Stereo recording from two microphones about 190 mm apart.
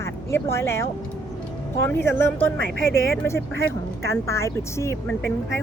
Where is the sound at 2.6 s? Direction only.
60° right (ahead or behind).